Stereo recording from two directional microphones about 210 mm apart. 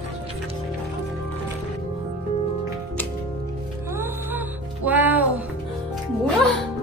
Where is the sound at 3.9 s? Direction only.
10° right (ahead or behind).